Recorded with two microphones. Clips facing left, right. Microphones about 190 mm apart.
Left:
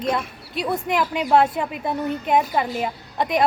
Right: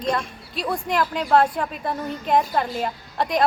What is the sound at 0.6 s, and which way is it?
Speech, 20° left (ahead or behind).